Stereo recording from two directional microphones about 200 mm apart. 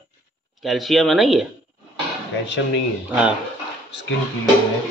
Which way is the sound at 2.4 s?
65° left (ahead or behind).